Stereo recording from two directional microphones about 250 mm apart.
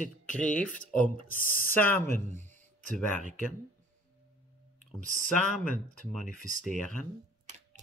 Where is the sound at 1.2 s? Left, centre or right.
Left.